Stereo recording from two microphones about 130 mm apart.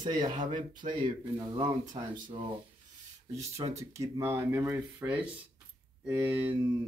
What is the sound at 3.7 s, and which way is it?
Speech, 25° right (ahead or behind).